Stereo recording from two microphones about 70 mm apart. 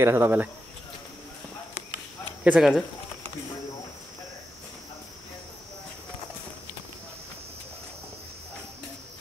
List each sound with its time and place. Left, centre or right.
0.0 s speech: right
2.5 s speech: centre